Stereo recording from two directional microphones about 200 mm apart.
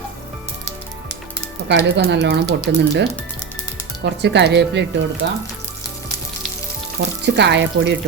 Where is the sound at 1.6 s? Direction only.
60° right (ahead or behind).